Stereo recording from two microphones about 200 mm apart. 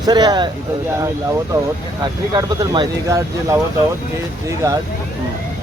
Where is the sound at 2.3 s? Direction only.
20° right (ahead or behind).